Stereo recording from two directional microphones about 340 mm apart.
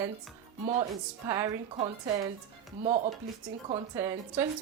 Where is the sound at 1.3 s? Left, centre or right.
Centre.